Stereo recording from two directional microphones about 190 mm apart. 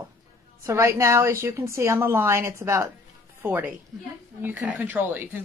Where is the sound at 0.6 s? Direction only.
15° right (ahead or behind).